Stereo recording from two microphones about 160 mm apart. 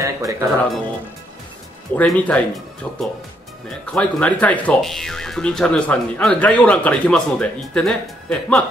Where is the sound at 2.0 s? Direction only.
10° left (ahead or behind).